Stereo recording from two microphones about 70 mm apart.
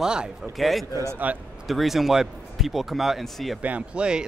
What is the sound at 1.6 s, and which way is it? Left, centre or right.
Speech, centre.